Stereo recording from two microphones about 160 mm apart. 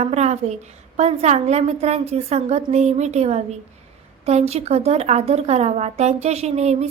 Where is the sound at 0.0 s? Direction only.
45° right (ahead or behind).